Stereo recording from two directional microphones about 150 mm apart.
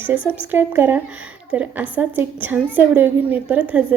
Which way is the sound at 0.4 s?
15° right (ahead or behind).